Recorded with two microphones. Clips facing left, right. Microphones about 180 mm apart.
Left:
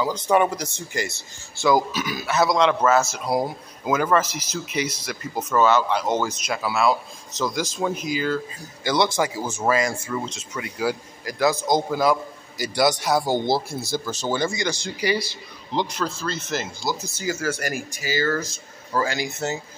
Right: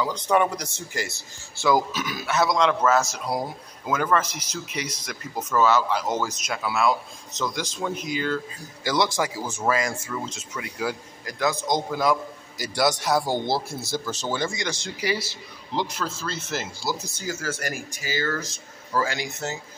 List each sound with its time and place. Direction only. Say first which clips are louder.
0.0 s a man's voice: left 2 dB; 5° left (ahead or behind)
6.9 s speech: left 2 dB; 35° left (ahead or behind)
7.5 s speech: left 4 dB; 5° left (ahead or behind)
9.7 s a man's voice: left 3 dB; centre (ahead or behind)
17.2 s a man's voice: left 4 dB; 10° left (ahead or behind)